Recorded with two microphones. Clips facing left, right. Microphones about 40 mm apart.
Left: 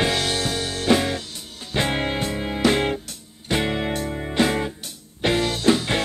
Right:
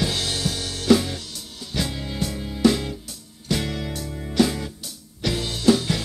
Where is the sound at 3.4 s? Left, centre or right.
Left.